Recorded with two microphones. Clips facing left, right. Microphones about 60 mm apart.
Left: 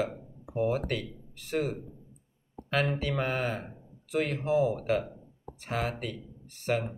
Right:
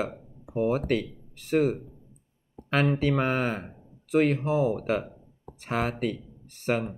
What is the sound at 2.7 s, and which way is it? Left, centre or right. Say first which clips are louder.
Speech: right 5 dB; right.